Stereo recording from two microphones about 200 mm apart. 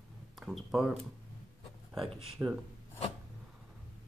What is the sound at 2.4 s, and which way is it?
Speech, 10° right (ahead or behind).